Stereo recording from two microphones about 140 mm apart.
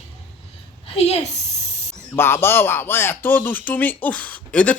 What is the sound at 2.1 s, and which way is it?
Speech, 15° left (ahead or behind).